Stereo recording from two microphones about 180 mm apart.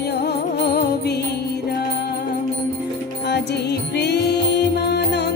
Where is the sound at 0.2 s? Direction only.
65° left (ahead or behind).